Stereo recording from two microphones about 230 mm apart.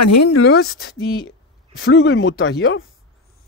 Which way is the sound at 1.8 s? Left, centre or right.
Left.